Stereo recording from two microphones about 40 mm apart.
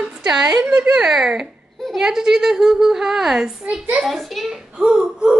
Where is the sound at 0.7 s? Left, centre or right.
Right.